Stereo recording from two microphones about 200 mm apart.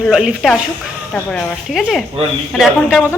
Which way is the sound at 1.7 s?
Centre (ahead or behind).